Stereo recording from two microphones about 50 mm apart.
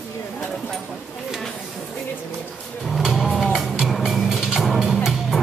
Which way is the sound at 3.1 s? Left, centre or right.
Centre.